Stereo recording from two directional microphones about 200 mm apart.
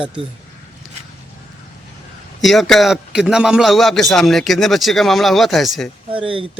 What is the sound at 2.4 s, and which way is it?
A man's voice, centre (ahead or behind).